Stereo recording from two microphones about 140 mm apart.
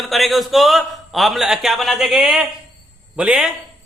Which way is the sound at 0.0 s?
Centre (ahead or behind).